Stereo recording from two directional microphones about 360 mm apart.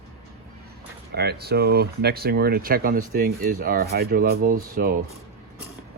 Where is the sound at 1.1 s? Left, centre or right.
Right.